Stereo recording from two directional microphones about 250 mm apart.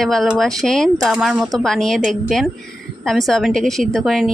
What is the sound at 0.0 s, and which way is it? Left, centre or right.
A woman's voice, centre.